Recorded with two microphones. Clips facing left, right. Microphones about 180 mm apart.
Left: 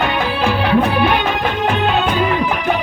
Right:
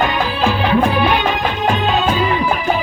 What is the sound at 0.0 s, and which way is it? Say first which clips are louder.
Music: right 1 dB; 60° left (ahead or behind).